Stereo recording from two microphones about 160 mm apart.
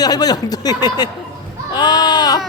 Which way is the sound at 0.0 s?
25° left (ahead or behind).